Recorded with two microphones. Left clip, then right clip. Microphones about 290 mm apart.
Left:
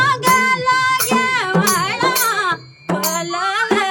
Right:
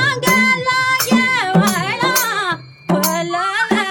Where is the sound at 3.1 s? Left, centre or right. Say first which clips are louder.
Right 1 dB; centre.